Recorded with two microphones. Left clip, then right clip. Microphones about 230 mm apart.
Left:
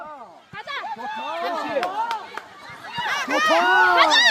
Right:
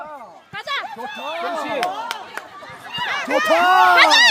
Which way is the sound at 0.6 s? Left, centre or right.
Right.